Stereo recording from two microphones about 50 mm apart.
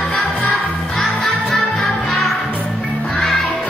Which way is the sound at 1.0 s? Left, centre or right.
Centre.